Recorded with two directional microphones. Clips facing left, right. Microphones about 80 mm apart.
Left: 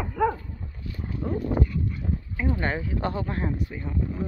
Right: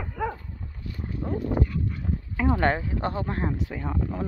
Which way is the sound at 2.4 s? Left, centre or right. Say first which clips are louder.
Right 5 dB; right.